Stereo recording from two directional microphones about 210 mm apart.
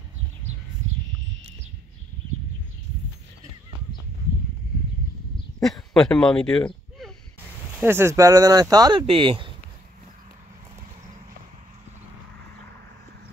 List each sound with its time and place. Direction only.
5.6 s speech: centre (ahead or behind)
7.7 s speech: 10° right (ahead or behind)